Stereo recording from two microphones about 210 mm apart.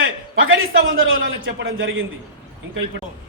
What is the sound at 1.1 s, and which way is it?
Speech, 60° right (ahead or behind).